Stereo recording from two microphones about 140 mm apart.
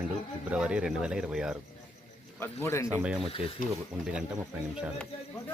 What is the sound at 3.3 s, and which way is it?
Speech, 40° left (ahead or behind).